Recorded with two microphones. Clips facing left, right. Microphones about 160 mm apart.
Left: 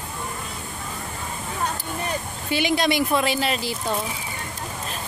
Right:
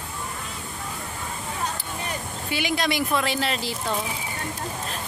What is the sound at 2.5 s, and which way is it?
Speech, 25° left (ahead or behind).